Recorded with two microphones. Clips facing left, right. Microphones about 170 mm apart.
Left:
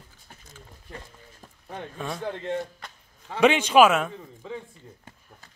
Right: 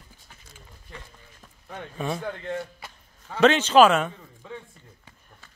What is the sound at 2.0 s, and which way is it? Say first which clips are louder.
Speech: right 5 dB; centre (ahead or behind).